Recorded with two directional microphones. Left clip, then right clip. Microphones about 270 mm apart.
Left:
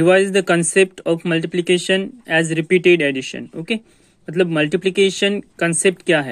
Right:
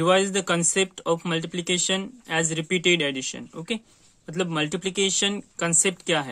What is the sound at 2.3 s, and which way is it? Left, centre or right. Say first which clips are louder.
Speech: left 9 dB; right.